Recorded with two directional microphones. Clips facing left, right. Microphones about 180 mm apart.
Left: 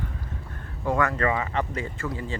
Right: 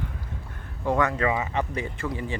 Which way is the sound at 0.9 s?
15° right (ahead or behind).